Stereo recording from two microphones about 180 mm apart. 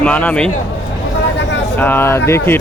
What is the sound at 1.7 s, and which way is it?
Speech, 10° left (ahead or behind).